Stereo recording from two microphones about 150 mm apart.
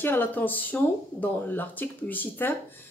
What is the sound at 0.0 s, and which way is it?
A woman's voice, 15° left (ahead or behind).